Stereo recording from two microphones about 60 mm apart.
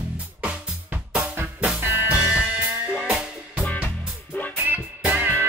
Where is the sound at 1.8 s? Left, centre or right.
Right.